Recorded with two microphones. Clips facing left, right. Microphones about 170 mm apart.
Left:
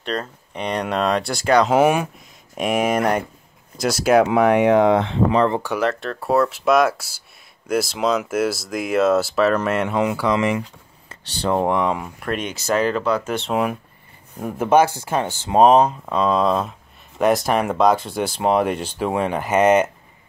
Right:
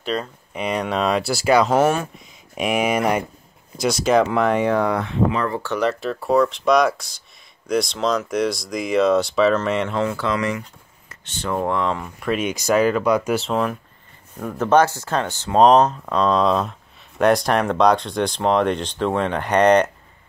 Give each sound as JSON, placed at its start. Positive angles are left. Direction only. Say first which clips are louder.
{"t": 0.0, "sound": "speech", "louder": "right 1 dB", "side_deg": 0}
{"t": 1.7, "sound": "speech", "louder": "left 1 dB", "side_deg": 10}
{"t": 2.1, "sound": "speech", "louder": "even", "side_deg": 0}
{"t": 5.8, "sound": "speech", "louder": "right 1 dB", "side_deg": 0}
{"t": 11.1, "sound": "speech", "louder": "left 4 dB", "side_deg": 30}
{"t": 11.6, "sound": "speech", "louder": "left 2 dB", "side_deg": 15}
{"t": 12.3, "sound": "speech", "louder": "right 3 dB", "side_deg": -10}
{"t": 13.5, "sound": "speech", "louder": "left 1 dB", "side_deg": 10}